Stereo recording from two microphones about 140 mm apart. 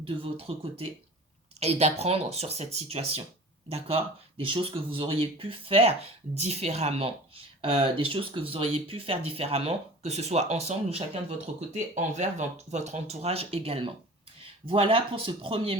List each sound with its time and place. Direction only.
0.0 s speech: 40° right (ahead or behind)